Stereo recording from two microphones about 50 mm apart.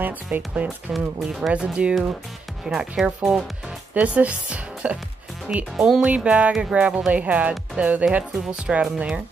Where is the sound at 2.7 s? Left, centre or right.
Centre.